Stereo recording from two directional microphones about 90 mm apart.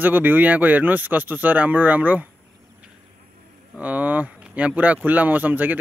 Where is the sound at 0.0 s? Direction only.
20° right (ahead or behind).